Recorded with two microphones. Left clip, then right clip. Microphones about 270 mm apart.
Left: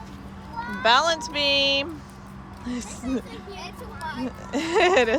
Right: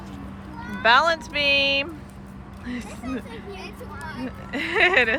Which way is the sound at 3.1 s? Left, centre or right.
Centre.